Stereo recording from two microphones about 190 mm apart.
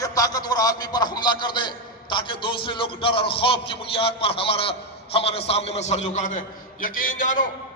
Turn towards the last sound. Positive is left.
turn(degrees=45)  # may be behind; listen again after turning